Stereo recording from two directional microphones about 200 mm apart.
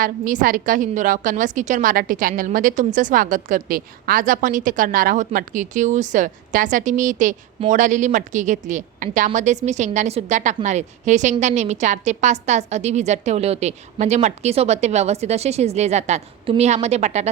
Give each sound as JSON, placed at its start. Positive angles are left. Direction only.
{"t": 0.0, "sound": "a woman's voice", "side_deg": -40}